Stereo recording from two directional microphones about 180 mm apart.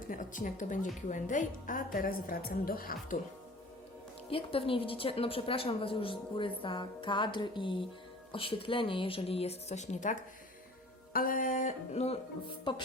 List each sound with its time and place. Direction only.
0.1 s a woman's voice: 45° left (ahead or behind)
4.3 s a woman's voice: 30° left (ahead or behind)
11.1 s a woman's voice: 50° left (ahead or behind)
12.7 s a woman's voice: 25° left (ahead or behind)